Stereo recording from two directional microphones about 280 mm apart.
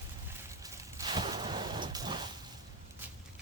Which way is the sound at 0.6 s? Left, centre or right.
Centre.